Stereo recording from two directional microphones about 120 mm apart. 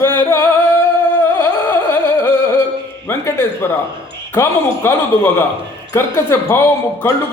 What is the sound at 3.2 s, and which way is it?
Speech, 20° left (ahead or behind).